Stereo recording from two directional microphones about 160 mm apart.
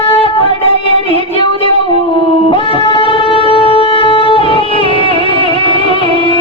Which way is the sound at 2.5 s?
35° left (ahead or behind).